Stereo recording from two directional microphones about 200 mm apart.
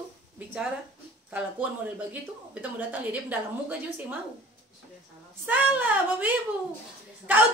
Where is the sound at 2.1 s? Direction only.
10° right (ahead or behind).